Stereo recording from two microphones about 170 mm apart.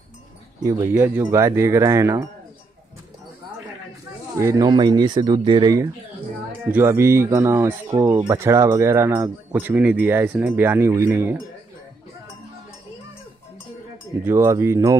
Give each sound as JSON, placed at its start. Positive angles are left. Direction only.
{"t": 0.7, "sound": "speech", "side_deg": -15}
{"t": 4.4, "sound": "speech", "side_deg": -20}
{"t": 14.2, "sound": "speech", "side_deg": -15}